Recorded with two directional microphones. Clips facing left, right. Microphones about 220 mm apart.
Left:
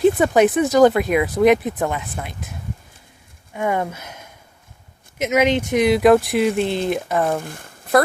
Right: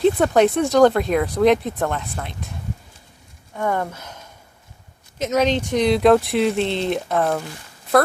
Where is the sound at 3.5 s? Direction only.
10° left (ahead or behind).